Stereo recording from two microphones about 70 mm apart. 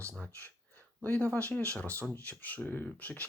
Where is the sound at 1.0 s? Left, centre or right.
Left.